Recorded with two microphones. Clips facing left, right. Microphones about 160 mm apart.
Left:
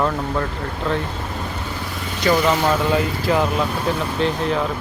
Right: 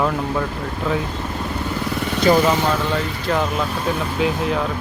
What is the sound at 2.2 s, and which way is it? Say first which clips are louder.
Speech: right 3 dB; 30° right (ahead or behind).